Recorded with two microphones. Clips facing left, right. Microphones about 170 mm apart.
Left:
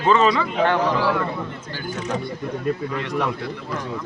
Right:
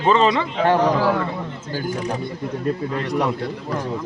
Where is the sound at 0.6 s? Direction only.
35° right (ahead or behind).